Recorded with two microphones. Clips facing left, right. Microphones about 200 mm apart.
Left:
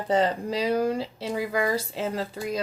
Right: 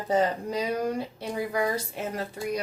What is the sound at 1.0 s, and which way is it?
Speech, 90° left.